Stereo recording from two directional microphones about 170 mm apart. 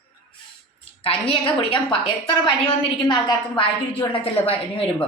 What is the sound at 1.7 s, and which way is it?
Speech, 30° left (ahead or behind).